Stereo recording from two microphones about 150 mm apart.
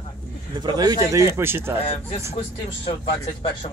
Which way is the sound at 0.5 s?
30° right (ahead or behind).